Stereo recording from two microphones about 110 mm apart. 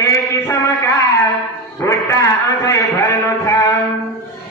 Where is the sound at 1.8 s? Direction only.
30° left (ahead or behind).